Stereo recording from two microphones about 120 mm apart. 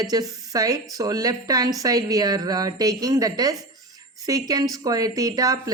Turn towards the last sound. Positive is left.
turn(degrees=-30)  # may be behind; listen again after turning